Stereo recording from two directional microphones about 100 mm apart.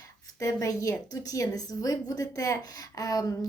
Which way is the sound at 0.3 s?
35° left (ahead or behind).